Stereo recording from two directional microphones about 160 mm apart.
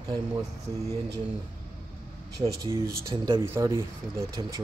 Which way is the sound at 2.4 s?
20° right (ahead or behind).